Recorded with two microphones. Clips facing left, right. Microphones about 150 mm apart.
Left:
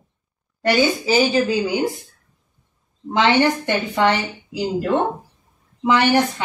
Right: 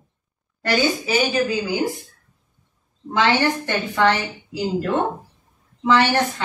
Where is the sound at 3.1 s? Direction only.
20° left (ahead or behind).